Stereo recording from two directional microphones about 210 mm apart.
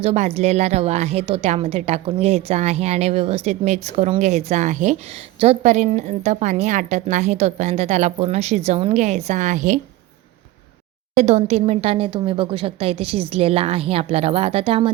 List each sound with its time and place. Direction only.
0.0 s a woman's voice: 30° right (ahead or behind)
11.1 s speech: 30° right (ahead or behind)